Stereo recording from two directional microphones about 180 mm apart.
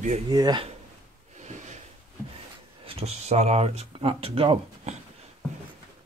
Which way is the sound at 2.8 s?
35° right (ahead or behind).